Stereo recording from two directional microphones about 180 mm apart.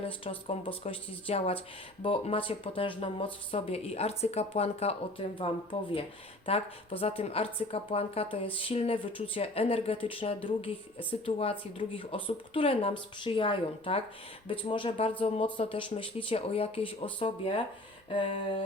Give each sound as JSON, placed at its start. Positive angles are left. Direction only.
{"t": 0.0, "sound": "a woman's voice", "side_deg": 30}